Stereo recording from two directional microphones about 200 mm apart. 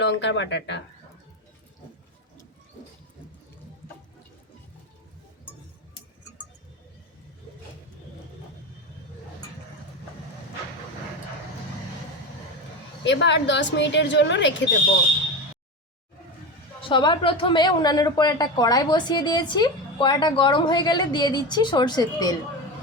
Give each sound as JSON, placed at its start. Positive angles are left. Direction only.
{"t": 0.0, "sound": "a woman's voice", "side_deg": 60}
{"t": 13.1, "sound": "a woman's voice", "side_deg": 65}
{"t": 16.9, "sound": "speech", "side_deg": 25}